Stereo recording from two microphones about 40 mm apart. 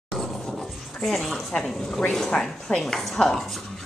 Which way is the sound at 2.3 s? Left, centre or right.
Left.